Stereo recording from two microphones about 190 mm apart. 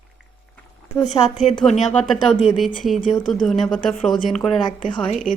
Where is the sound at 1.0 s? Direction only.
40° left (ahead or behind).